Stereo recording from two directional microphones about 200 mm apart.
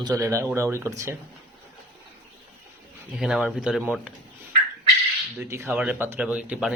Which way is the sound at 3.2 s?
Centre (ahead or behind).